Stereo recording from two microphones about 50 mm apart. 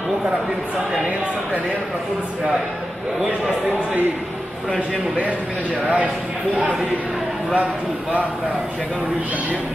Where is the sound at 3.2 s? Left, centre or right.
Right.